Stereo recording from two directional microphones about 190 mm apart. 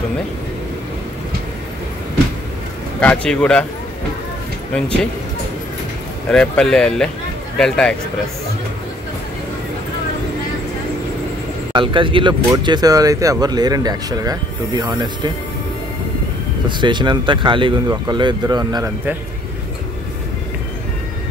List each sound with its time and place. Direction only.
3.0 s speech: 5° left (ahead or behind)
6.3 s speech: 5° left (ahead or behind)
11.7 s speech: 25° right (ahead or behind)
16.6 s speech: 25° right (ahead or behind)